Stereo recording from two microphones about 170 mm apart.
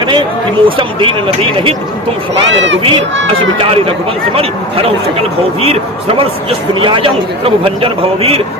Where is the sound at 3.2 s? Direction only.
35° right (ahead or behind).